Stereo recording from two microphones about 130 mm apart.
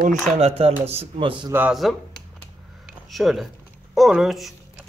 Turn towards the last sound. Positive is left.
turn(degrees=0)  # may be behind; listen again after turning